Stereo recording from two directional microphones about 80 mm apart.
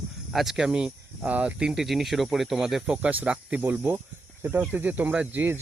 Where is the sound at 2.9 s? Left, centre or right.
Centre.